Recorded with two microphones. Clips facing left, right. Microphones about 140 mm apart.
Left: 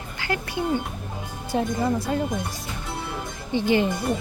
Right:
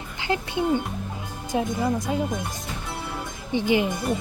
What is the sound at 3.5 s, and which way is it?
Speech, 15° right (ahead or behind).